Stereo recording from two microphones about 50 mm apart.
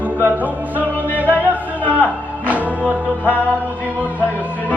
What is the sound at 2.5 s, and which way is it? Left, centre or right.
Music, right.